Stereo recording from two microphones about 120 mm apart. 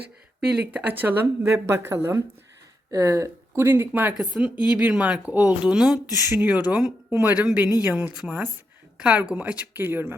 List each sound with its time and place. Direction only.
0.5 s speech: 10° right (ahead or behind)
6.1 s speech: 30° left (ahead or behind)
6.3 s speech: 15° right (ahead or behind)